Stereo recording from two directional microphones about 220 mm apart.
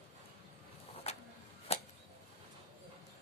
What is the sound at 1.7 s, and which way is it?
Arrow, 30° left (ahead or behind).